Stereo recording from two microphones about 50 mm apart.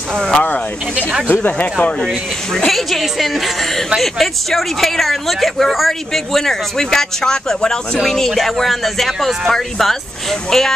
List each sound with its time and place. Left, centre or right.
0.1 s speech: centre
1.3 s speech: left
1.8 s speech: left
2.5 s speech: centre